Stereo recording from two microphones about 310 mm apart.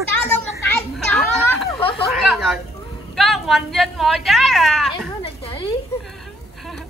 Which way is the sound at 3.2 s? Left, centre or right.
Centre.